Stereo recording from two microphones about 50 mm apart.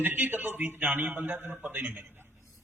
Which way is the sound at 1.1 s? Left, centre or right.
Right.